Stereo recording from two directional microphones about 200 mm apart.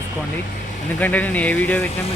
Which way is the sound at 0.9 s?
5° left (ahead or behind).